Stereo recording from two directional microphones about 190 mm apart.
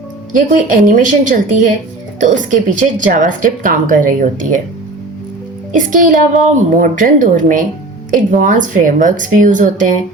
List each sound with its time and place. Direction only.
0.3 s speech: 45° right (ahead or behind)
5.7 s speech: 45° right (ahead or behind)